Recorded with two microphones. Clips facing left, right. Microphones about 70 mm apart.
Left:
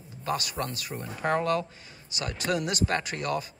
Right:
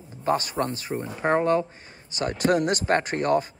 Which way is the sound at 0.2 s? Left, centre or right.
Right.